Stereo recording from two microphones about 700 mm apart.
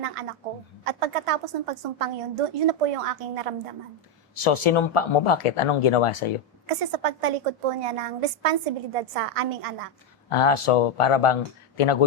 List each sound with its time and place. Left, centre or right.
0.0 s a woman's voice: right
4.4 s speech: left
6.7 s a woman's voice: right
10.2 s speech: left